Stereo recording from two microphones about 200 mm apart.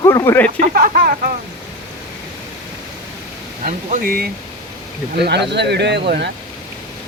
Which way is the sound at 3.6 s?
40° right (ahead or behind).